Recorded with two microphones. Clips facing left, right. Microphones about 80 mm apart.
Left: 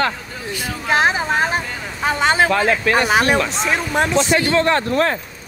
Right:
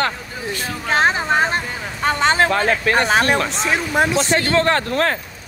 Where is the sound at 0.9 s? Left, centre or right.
Centre.